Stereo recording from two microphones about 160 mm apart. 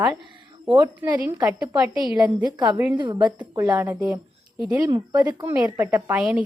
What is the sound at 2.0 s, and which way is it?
Speech, 5° right (ahead or behind).